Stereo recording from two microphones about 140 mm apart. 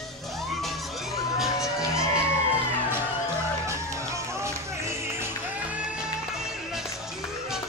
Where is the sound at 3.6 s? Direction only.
20° right (ahead or behind); by 6.9 s 5° right (ahead or behind).